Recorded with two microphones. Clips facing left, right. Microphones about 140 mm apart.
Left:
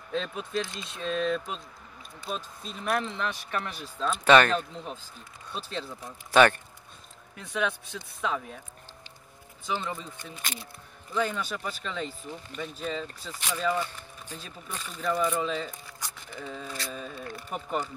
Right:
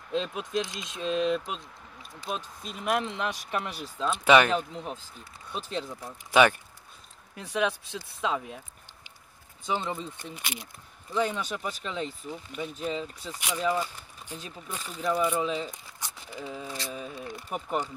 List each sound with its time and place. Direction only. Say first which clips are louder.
0.1 s speech: right 2 dB; 15° right (ahead or behind)
9.7 s speech: right 2 dB; 25° right (ahead or behind)
10.4 s speech: even; 10° right (ahead or behind)